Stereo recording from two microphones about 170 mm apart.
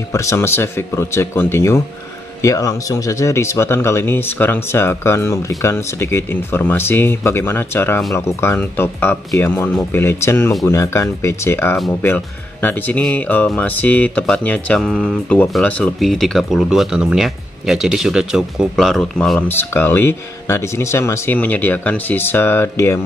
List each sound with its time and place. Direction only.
0.1 s speech: 15° left (ahead or behind)